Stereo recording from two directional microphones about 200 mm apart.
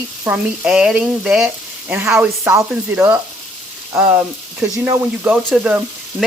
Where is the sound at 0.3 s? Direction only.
5° right (ahead or behind).